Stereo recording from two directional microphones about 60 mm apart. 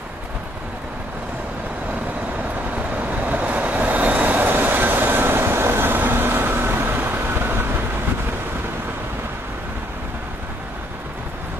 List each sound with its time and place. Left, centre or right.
3.0 s vehicle: right